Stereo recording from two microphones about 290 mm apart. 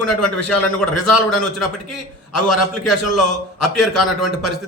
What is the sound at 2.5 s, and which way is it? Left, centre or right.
Speech, left.